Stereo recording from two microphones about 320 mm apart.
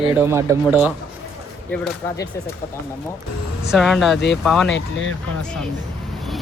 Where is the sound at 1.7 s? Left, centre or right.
Centre.